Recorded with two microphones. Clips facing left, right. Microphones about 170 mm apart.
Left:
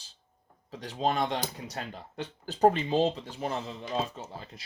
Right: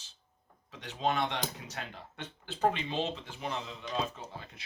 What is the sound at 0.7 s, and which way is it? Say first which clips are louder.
Speech: left 3 dB; 35° left (ahead or behind).